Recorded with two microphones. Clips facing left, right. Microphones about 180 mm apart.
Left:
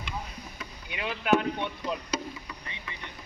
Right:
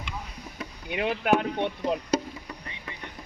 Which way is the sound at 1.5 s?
60° right (ahead or behind).